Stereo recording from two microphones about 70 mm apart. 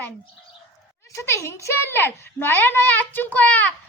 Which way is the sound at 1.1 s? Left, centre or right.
Left.